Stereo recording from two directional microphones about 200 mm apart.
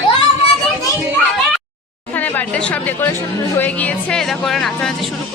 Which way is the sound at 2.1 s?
10° left (ahead or behind).